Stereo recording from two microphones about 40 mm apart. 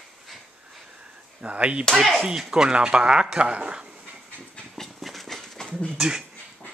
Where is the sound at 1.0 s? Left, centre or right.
Right.